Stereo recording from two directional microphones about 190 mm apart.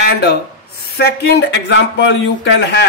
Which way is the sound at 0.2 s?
60° left (ahead or behind).